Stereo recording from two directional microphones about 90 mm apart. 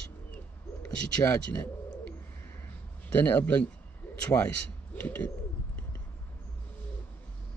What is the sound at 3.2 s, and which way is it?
Speech, 20° left (ahead or behind).